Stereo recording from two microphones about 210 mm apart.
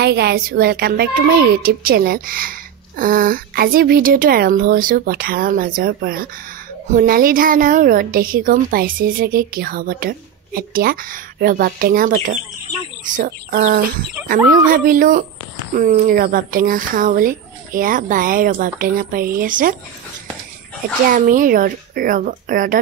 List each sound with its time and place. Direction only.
0.0 s a woman's voice: 50° right (ahead or behind)
21.1 s speech: 40° right (ahead or behind)